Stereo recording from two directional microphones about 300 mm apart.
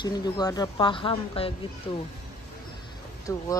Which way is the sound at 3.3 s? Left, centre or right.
Centre.